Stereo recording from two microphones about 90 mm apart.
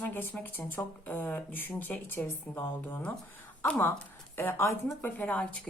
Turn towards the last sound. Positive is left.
turn(degrees=15)  # may be behind; listen again after turning